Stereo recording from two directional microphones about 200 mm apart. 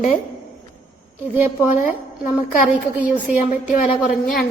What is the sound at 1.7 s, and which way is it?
Speech, 40° left (ahead or behind).